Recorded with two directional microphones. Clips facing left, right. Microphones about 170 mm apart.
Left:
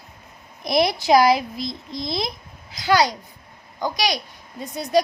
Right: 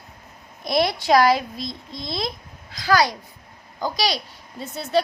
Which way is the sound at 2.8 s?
25° left (ahead or behind).